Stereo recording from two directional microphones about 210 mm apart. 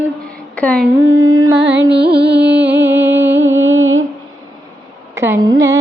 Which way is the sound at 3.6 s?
65° right (ahead or behind).